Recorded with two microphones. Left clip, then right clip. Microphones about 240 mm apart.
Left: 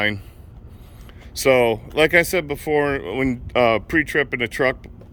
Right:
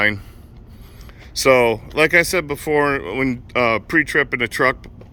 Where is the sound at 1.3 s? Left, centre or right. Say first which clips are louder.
Right 2 dB; centre.